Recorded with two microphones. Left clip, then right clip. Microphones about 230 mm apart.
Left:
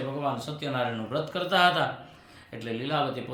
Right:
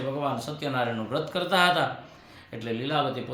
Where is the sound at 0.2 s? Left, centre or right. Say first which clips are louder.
Right 1 dB; centre.